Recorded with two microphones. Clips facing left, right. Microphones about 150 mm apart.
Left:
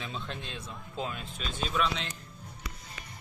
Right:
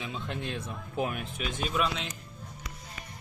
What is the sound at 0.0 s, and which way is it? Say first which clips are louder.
Speech: right 2 dB; 15° right (ahead or behind).